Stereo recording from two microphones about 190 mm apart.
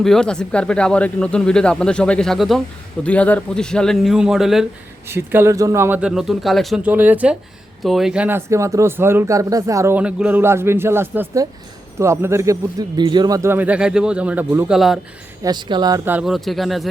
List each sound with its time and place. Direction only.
0.0 s speech: 5° left (ahead or behind)
5.0 s speech: 10° right (ahead or behind)
15.4 s speech: 25° right (ahead or behind)
16.0 s speech: 5° right (ahead or behind)